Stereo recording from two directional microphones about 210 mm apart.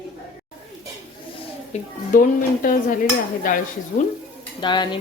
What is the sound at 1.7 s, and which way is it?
Speech, 30° left (ahead or behind).